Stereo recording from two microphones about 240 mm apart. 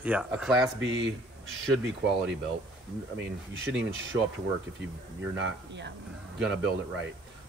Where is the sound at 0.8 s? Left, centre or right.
Right.